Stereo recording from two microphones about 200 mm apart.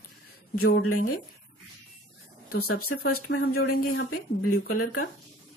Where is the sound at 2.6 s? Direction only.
90° left.